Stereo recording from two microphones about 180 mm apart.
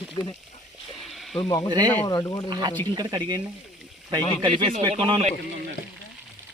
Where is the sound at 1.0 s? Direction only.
Centre (ahead or behind).